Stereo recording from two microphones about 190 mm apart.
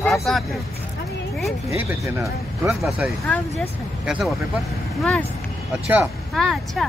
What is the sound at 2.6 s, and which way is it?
Speech, centre (ahead or behind).